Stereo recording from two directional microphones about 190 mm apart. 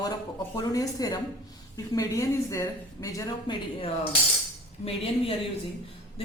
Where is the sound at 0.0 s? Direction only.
20° left (ahead or behind).